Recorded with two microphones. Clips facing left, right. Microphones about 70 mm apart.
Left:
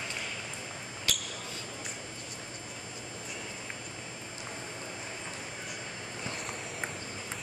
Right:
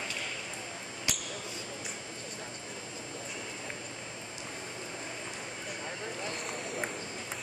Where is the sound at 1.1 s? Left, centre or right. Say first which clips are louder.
Left 1 dB; centre.